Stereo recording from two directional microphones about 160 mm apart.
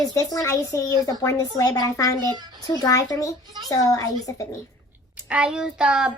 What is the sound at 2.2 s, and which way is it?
Speech, 25° right (ahead or behind).